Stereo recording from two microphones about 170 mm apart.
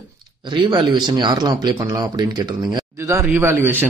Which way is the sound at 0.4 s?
25° right (ahead or behind).